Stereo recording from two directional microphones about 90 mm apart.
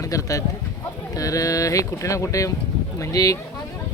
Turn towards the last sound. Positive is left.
turn(degrees=45)  # may be behind; listen again after turning